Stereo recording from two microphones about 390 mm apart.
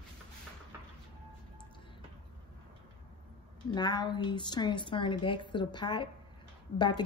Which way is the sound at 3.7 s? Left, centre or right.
Centre.